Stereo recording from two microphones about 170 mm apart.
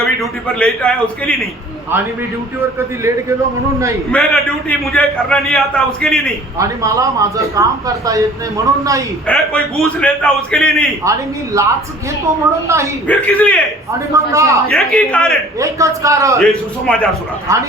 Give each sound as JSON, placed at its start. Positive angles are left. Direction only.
{"t": 0.0, "sound": "a man's voice", "side_deg": 5}
{"t": 2.7, "sound": "a man's voice", "side_deg": -15}
{"t": 4.1, "sound": "a man's voice", "side_deg": 0}
{"t": 6.6, "sound": "a man's voice", "side_deg": -20}
{"t": 9.2, "sound": "a man's voice", "side_deg": 5}
{"t": 11.5, "sound": "a man's voice", "side_deg": -20}
{"t": 13.1, "sound": "a man's voice", "side_deg": 10}
{"t": 14.1, "sound": "a man's voice", "side_deg": -20}
{"t": 14.7, "sound": "a man's voice", "side_deg": 5}
{"t": 15.5, "sound": "a man's voice", "side_deg": -20}
{"t": 16.4, "sound": "a man's voice", "side_deg": 5}